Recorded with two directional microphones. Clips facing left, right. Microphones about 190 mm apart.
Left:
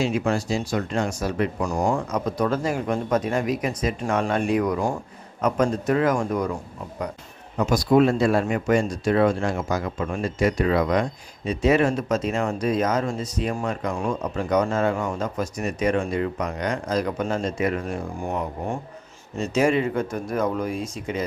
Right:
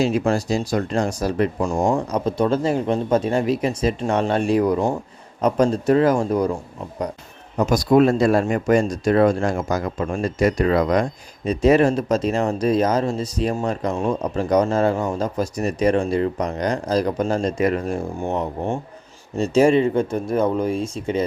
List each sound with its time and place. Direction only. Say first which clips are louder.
0.0 s speech: right 4 dB; 35° right (ahead or behind)
7.5 s speech: right 3 dB; 40° right (ahead or behind)
18.2 s speech: right 4 dB; 25° right (ahead or behind)